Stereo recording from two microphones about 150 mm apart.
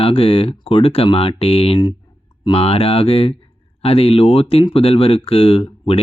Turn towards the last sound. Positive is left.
turn(degrees=40)  # may be behind; listen again after turning